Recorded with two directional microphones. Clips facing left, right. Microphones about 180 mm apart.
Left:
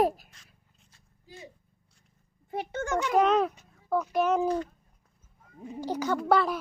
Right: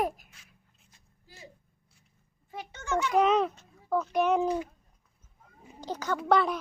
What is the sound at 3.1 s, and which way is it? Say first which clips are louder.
Speech: left 1 dB; centre (ahead or behind).